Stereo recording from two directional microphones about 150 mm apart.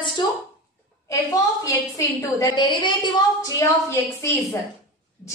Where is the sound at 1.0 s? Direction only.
20° left (ahead or behind).